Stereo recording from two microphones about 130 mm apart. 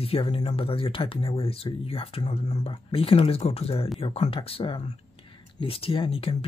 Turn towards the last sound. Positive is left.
turn(degrees=45)  # may be behind; listen again after turning